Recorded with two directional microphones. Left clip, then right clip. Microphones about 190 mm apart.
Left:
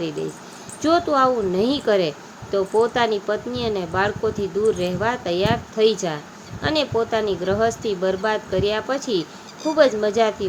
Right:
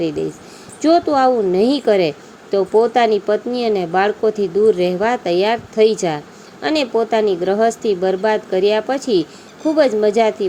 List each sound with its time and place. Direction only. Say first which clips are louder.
0.8 s speech: right 4 dB; 20° right (ahead or behind)